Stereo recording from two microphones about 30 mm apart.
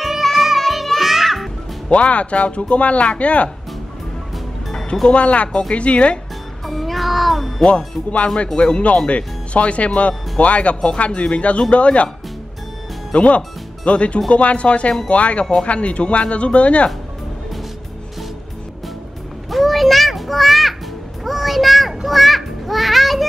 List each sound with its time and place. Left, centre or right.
0.2 s music: centre
1.9 s speech: left
5.1 s speech: left
6.6 s music: centre
7.6 s speech: left
13.1 s speech: left
19.5 s music: centre
21.2 s children playing: centre